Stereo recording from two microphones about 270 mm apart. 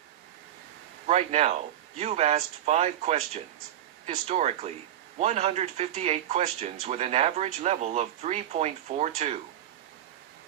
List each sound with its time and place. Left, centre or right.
1.0 s speech: right